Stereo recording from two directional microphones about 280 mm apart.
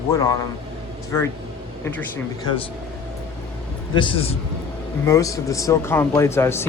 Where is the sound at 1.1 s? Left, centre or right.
Centre.